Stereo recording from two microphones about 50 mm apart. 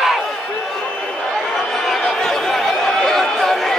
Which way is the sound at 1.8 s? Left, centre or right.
Centre.